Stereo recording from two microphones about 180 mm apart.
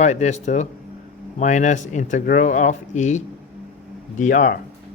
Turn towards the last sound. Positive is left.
turn(degrees=45)  # may be behind; listen again after turning